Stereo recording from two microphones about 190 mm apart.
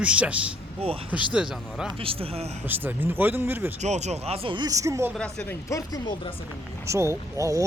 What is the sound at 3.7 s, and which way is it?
Speech, 35° right (ahead or behind).